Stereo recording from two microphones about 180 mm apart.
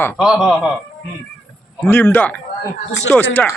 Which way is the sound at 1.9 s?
10° left (ahead or behind).